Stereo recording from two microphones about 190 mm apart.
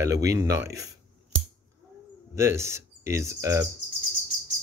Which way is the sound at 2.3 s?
15° right (ahead or behind).